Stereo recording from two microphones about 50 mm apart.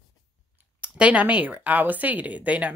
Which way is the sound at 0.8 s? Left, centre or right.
Right.